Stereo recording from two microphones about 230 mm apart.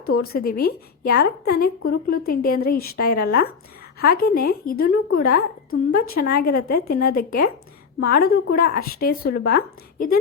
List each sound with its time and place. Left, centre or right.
0.2 s speech: left